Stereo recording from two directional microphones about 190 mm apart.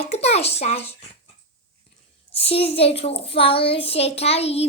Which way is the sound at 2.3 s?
30° left (ahead or behind).